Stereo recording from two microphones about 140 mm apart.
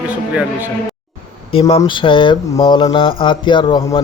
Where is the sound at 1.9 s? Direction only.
35° left (ahead or behind).